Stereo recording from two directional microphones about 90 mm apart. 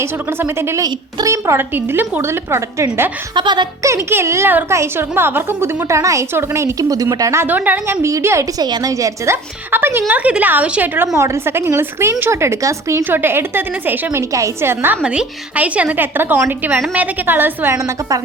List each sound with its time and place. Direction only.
0.0 s a woman's voice: 25° right (ahead or behind)
0.8 s a woman's voice: 45° right (ahead or behind)
3.3 s speech: 55° right (ahead or behind)
3.8 s speech: 30° right (ahead or behind)
7.4 s a woman's voice: 20° right (ahead or behind)
8.0 s speech: 30° right (ahead or behind)
8.5 s a woman's voice: 45° right (ahead or behind); by 11.1 s 20° right (ahead or behind)
11.1 s a woman's voice: 35° right (ahead or behind)
15.0 s a woman's voice: 10° right (ahead or behind); by 18.2 s 35° right (ahead or behind)